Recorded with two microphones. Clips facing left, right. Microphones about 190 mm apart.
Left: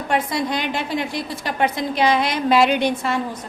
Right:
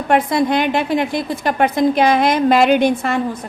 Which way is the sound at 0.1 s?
55° right (ahead or behind).